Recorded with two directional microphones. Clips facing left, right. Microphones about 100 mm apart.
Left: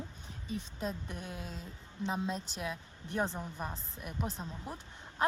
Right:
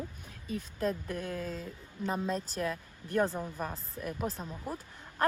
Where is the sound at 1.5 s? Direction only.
45° right (ahead or behind).